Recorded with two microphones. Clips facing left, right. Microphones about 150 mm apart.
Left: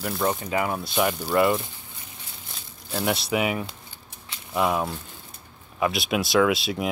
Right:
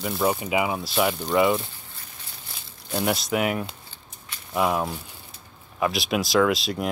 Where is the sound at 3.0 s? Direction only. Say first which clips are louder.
Even; centre (ahead or behind).